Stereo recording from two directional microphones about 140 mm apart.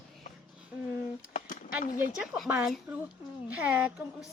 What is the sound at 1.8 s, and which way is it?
Speech, 75° left (ahead or behind).